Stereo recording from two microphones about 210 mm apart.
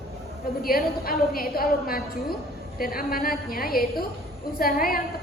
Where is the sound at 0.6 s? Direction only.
45° left (ahead or behind).